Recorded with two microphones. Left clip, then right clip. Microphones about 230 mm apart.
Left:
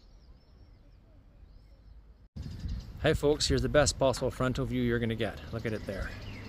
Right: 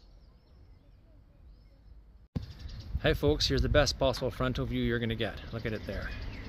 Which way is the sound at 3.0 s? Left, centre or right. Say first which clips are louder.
Left 1 dB; centre.